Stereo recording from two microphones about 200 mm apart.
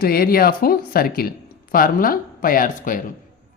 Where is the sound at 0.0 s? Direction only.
50° left (ahead or behind).